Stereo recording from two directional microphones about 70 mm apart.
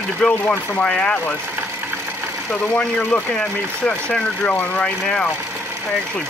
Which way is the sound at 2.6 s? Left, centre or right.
Centre.